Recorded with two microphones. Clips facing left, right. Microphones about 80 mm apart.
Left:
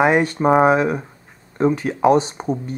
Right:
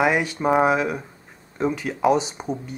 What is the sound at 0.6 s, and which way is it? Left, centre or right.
Speech, left.